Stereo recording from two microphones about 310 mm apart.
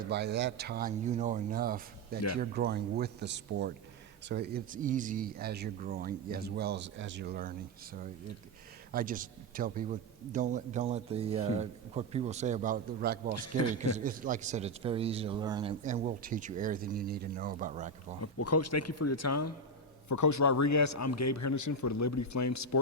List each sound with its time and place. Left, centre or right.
0.1 s a man's voice: right
8.9 s a man's voice: right
13.3 s speech: left
13.9 s a man's voice: right
15.8 s a man's voice: right
18.2 s speech: left
20.1 s a man's voice: left